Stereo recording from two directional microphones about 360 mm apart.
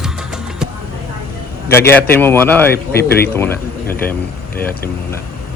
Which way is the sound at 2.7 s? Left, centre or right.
Left.